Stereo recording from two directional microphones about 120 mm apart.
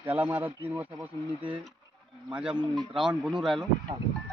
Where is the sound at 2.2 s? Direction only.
10° right (ahead or behind).